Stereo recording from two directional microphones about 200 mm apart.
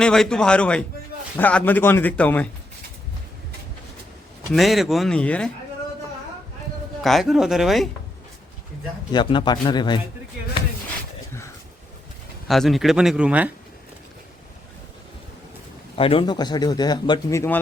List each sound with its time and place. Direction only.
0.0 s speech: 5° left (ahead or behind)
4.5 s speech: centre (ahead or behind)
7.0 s speech: centre (ahead or behind)
9.1 s speech: 20° left (ahead or behind)
12.5 s speech: centre (ahead or behind)
16.0 s speech: 25° left (ahead or behind)